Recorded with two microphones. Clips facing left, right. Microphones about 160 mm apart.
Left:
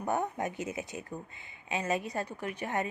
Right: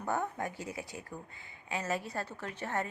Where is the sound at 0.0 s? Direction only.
20° left (ahead or behind).